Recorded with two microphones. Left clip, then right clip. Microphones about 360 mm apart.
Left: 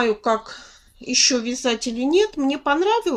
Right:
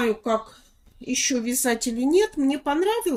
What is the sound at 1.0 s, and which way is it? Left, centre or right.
Speech, centre.